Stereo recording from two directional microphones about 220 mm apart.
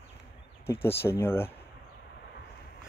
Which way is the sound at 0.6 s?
10° left (ahead or behind).